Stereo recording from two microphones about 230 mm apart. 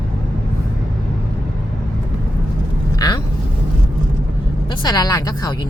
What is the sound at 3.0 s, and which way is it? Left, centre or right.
Speech, centre.